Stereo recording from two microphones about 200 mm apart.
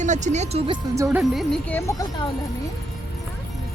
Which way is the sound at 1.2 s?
Centre (ahead or behind).